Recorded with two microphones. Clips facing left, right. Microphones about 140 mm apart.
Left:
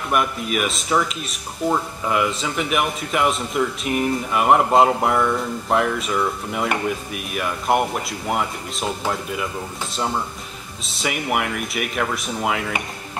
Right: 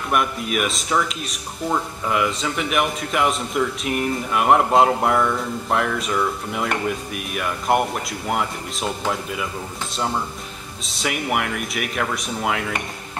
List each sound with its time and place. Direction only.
0.1 s speech: centre (ahead or behind)
10.9 s speech: centre (ahead or behind)